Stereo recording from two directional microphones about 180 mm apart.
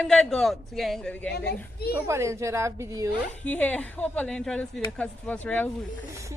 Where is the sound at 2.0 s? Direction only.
15° right (ahead or behind).